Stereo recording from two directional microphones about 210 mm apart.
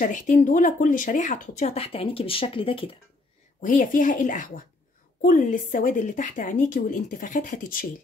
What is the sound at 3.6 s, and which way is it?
A woman's voice, 40° left (ahead or behind).